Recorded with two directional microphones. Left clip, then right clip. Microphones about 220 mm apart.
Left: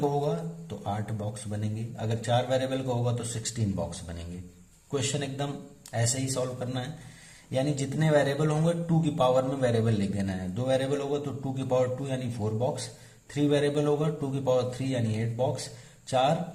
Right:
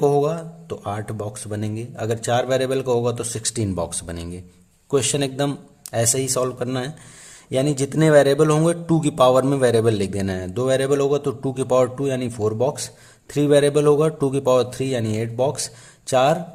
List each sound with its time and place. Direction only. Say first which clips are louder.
0.2 s speech: right 9 dB; 40° right (ahead or behind)